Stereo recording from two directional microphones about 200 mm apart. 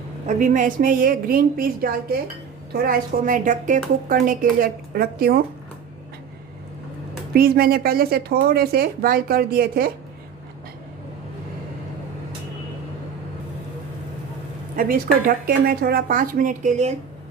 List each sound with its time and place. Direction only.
0.3 s speech: 40° right (ahead or behind)
7.3 s speech: 50° right (ahead or behind)
14.8 s speech: 45° right (ahead or behind)